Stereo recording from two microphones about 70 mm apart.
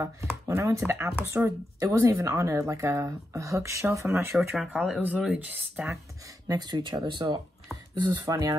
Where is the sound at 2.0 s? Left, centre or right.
Right.